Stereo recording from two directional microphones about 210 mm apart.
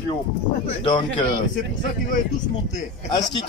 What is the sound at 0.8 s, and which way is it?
Speech, 25° left (ahead or behind).